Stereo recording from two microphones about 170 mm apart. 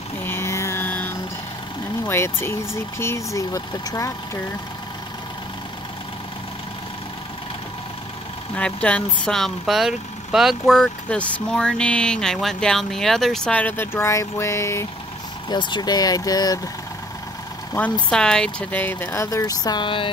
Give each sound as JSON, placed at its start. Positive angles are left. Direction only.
{"t": 0.2, "sound": "music", "side_deg": 15}
{"t": 2.0, "sound": "speech", "side_deg": 15}
{"t": 8.5, "sound": "a woman's voice", "side_deg": 5}
{"t": 18.1, "sound": "speech", "side_deg": 5}